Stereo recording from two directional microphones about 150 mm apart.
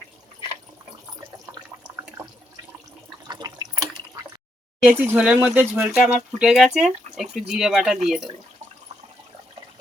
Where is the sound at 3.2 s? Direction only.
25° right (ahead or behind).